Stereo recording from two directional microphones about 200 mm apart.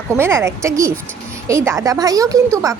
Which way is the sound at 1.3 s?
15° right (ahead or behind).